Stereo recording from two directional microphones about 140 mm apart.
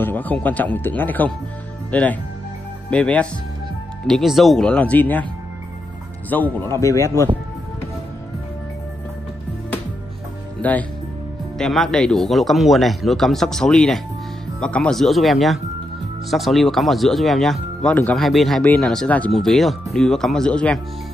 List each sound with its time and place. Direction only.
0.0 s speech: 10° left (ahead or behind)
6.3 s a man's voice: 15° left (ahead or behind)
10.6 s speech: 10° left (ahead or behind)